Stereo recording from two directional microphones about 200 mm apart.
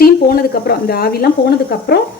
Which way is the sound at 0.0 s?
50° left (ahead or behind).